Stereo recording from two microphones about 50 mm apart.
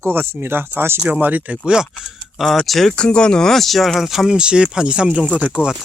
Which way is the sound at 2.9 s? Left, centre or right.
Centre.